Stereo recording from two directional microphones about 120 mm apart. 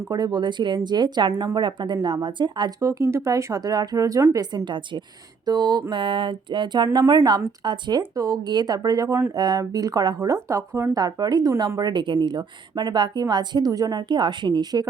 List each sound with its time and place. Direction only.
0.0 s a woman's voice: 35° right (ahead or behind)
2.8 s speech: 25° right (ahead or behind)
4.5 s a woman's voice: 40° right (ahead or behind)